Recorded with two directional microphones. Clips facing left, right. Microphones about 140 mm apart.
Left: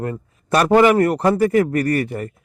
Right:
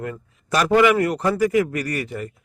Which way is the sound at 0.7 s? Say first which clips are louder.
Left 3 dB; 40° left (ahead or behind).